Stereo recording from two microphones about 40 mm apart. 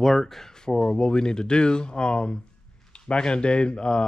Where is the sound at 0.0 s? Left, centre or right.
Centre.